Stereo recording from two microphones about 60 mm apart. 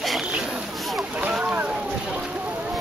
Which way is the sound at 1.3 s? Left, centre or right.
Centre.